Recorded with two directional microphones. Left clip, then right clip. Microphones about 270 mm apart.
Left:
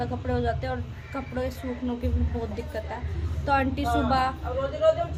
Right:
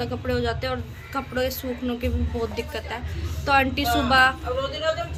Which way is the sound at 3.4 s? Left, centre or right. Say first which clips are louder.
Right 4 dB; centre.